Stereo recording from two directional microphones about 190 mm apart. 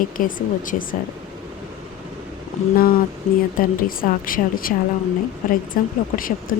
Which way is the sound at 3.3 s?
40° left (ahead or behind).